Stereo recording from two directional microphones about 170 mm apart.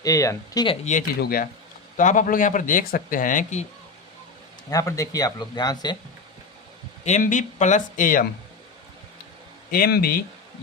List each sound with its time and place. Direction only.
0.0 s speech: 20° left (ahead or behind)
1.2 s a man's voice: 60° left (ahead or behind)
4.7 s speech: 20° left (ahead or behind)
7.0 s speech: 45° left (ahead or behind)
9.7 s a man's voice: 60° left (ahead or behind)